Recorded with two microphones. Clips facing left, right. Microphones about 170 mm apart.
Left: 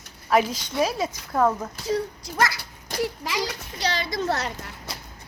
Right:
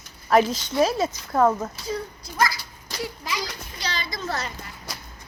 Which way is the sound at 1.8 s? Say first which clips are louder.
Left 4 dB; 80° left.